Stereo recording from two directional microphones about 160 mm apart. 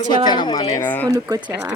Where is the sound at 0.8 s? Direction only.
10° left (ahead or behind).